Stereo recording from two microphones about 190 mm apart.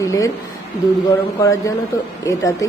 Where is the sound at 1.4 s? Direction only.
15° left (ahead or behind).